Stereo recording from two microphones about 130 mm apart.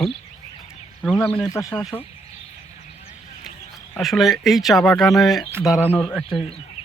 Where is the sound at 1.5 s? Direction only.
25° left (ahead or behind).